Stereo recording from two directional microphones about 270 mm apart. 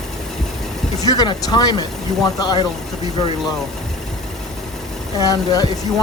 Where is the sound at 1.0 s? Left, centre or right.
Centre.